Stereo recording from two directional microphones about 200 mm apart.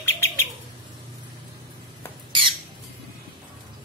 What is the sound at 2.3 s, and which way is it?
Squawk, 25° right (ahead or behind).